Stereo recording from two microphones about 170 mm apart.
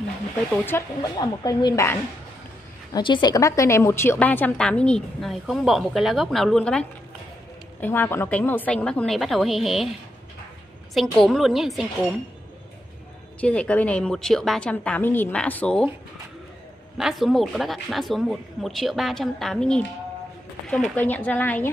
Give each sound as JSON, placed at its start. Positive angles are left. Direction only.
{"t": 0.5, "sound": "a woman's voice", "side_deg": 15}
{"t": 11.0, "sound": "a woman's voice", "side_deg": 0}
{"t": 13.4, "sound": "a woman's voice", "side_deg": 5}
{"t": 17.0, "sound": "a woman's voice", "side_deg": 0}